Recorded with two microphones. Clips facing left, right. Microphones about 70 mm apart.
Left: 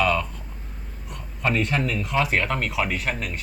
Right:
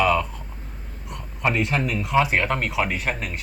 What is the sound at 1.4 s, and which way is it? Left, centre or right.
Speech, centre.